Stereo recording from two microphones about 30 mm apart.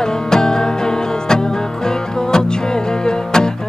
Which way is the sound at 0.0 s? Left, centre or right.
Left.